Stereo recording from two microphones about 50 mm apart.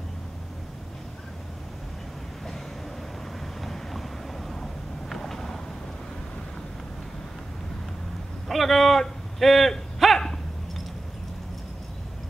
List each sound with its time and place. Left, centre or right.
3.6 s boat: centre
5.1 s vehicle: centre
8.5 s a sound: centre